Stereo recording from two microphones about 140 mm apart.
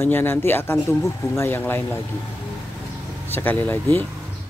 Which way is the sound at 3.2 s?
15° left (ahead or behind).